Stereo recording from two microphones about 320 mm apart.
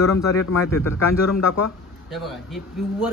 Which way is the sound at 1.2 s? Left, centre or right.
Left.